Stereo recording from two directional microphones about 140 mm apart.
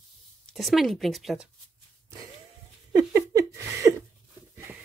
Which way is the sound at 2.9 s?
25° right (ahead or behind).